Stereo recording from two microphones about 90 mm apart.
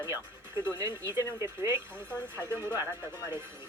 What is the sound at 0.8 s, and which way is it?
Speech, 35° right (ahead or behind).